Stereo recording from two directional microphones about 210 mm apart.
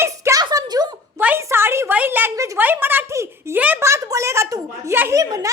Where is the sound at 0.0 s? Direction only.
15° right (ahead or behind).